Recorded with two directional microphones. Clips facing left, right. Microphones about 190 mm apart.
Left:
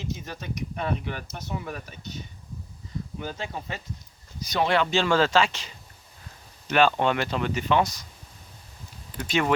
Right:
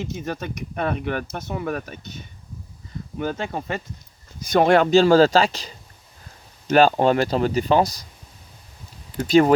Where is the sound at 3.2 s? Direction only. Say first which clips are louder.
Right 10 dB; 60° right (ahead or behind); by 8.1 s 35° right (ahead or behind).